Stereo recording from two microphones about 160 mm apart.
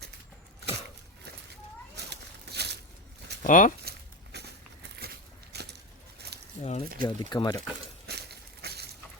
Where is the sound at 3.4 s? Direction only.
55° left (ahead or behind).